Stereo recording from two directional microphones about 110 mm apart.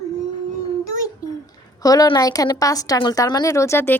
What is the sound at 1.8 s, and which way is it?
A child's voice, 35° left (ahead or behind).